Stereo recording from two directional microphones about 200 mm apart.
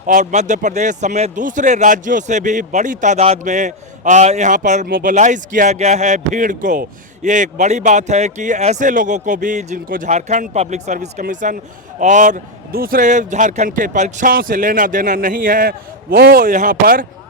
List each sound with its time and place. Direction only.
0.0 s a man's voice: 40° right (ahead or behind)